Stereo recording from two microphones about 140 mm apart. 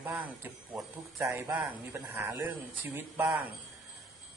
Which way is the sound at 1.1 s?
15° right (ahead or behind).